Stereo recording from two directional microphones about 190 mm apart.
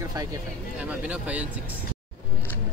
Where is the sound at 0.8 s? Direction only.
5° right (ahead or behind).